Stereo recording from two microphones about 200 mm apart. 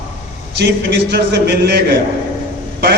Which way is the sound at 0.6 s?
60° right (ahead or behind).